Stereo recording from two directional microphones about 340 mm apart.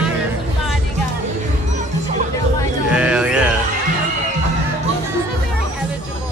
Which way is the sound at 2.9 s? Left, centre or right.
Centre.